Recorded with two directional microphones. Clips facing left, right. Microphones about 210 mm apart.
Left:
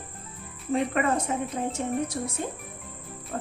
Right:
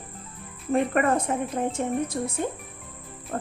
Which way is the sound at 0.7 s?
55° right (ahead or behind).